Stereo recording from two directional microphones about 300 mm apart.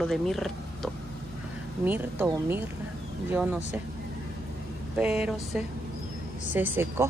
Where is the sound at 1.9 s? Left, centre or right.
Centre.